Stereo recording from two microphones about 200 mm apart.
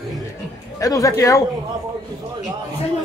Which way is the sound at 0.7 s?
15° left (ahead or behind).